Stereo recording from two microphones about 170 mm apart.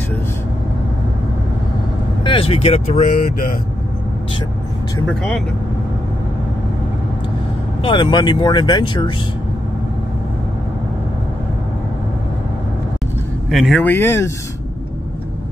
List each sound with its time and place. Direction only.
2.2 s speech: 30° left (ahead or behind)
3.1 s speech: 55° left (ahead or behind)
5.0 s speech: 5° left (ahead or behind)
7.8 s speech: 30° left (ahead or behind)
13.5 s speech: centre (ahead or behind)
13.8 s speech: 15° left (ahead or behind)